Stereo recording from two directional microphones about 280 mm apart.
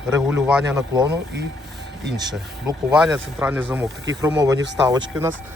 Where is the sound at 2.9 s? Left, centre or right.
Centre.